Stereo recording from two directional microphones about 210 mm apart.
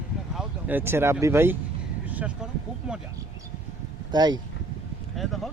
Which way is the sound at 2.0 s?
5° right (ahead or behind).